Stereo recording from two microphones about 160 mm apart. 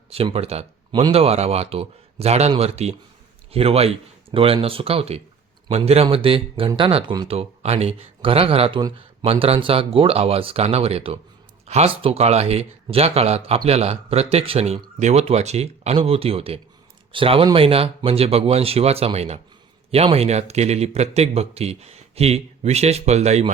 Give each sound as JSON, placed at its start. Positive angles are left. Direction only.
{"t": 0.1, "sound": "speech", "side_deg": -35}